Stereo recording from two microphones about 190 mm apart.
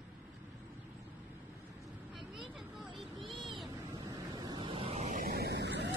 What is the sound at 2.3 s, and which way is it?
Vehicle, centre (ahead or behind).